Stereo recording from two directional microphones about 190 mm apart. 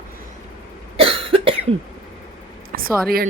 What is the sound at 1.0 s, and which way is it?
Cough, 30° right (ahead or behind).